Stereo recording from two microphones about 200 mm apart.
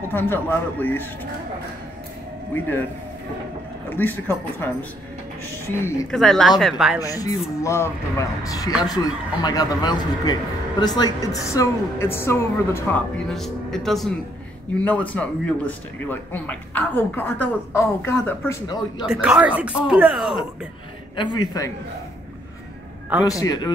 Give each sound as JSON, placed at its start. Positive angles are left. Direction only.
{"t": 0.1, "sound": "speech", "side_deg": 10}
{"t": 3.9, "sound": "speech", "side_deg": 10}
{"t": 5.7, "sound": "speech", "side_deg": 10}
{"t": 7.0, "sound": "speech", "side_deg": 15}
{"t": 19.0, "sound": "speech", "side_deg": -5}
{"t": 21.5, "sound": "speech", "side_deg": 15}
{"t": 23.2, "sound": "speech", "side_deg": 15}